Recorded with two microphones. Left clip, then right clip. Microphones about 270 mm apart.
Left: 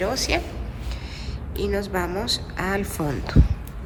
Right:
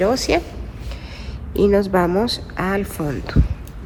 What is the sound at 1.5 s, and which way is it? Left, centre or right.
A woman's voice, centre.